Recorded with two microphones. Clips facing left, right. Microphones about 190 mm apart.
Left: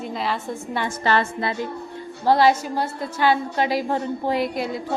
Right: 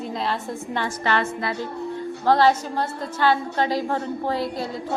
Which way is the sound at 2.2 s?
10° left (ahead or behind).